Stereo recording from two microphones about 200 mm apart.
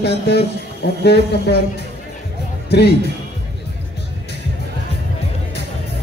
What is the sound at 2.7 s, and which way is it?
Speech, 55° left (ahead or behind).